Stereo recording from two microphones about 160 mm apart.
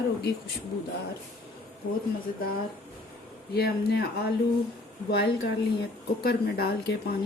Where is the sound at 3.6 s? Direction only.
75° left (ahead or behind).